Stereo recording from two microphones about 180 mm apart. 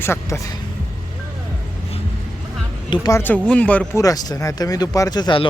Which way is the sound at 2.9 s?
20° left (ahead or behind).